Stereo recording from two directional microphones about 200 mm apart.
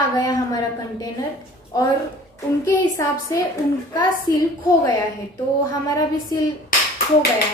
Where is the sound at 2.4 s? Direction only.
15° left (ahead or behind).